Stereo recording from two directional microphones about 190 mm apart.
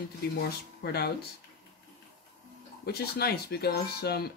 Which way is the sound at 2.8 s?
55° left (ahead or behind).